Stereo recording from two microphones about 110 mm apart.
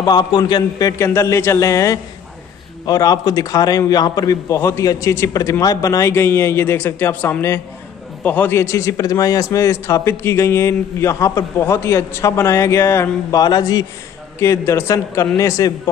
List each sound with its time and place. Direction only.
0.0 s a man's voice: 45° left (ahead or behind)
4.6 s a man's voice: 20° left (ahead or behind)
13.4 s a man's voice: 35° left (ahead or behind)
14.4 s a man's voice: 25° left (ahead or behind)